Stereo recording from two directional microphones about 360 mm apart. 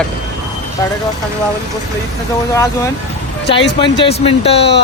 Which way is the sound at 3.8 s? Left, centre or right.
Centre.